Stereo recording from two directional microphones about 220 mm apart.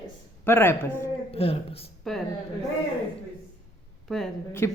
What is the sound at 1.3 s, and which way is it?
Speech, 25° left (ahead or behind).